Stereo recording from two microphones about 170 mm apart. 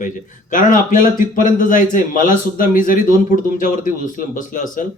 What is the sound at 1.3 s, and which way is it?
A man's voice, 50° left (ahead or behind).